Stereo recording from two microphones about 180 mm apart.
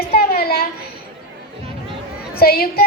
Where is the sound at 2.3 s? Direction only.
55° left (ahead or behind).